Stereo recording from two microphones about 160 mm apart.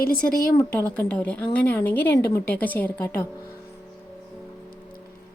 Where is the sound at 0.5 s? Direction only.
10° left (ahead or behind).